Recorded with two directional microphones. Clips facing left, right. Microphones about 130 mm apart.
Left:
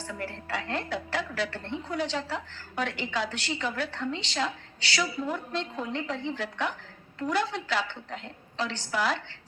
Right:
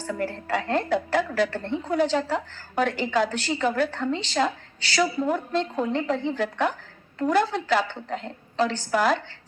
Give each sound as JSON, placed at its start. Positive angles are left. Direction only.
{"t": 0.0, "sound": "a woman's voice", "side_deg": -45}